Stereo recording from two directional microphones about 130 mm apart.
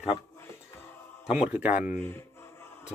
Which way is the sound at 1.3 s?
10° right (ahead or behind).